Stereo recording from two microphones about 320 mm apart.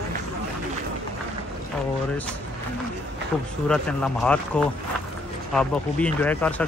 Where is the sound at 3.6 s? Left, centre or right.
Centre.